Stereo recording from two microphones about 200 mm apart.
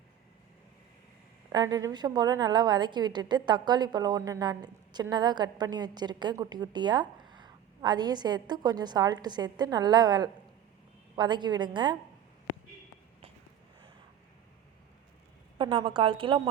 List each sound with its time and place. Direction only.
1.5 s a woman's voice: 20° right (ahead or behind)
15.5 s a woman's voice: 25° right (ahead or behind)